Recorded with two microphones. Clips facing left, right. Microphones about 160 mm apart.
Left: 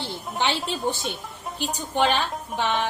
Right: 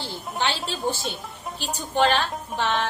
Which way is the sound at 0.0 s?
15° left (ahead or behind).